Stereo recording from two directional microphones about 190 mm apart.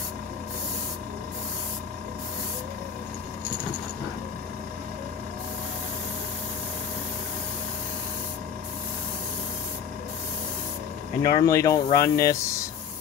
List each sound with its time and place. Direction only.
11.2 s speech: 20° left (ahead or behind)